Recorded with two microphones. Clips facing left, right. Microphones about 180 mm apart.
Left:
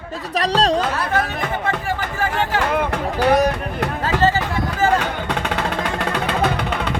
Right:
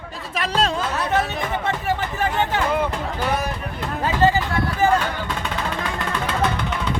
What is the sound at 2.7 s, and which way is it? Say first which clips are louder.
Music: left 2 dB; 65° left (ahead or behind).